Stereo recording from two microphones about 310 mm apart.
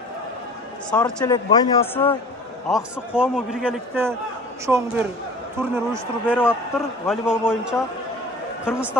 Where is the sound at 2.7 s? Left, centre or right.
Centre.